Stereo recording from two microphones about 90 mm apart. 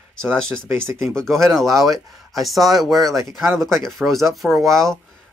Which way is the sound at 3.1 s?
30° right (ahead or behind).